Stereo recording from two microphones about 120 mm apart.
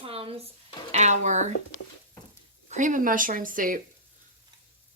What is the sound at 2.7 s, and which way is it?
Speech, 90° right.